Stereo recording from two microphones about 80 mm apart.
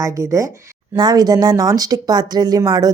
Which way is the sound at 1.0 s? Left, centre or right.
Right.